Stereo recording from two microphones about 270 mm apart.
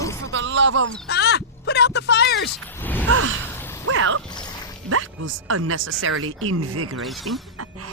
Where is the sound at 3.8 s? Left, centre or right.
Right.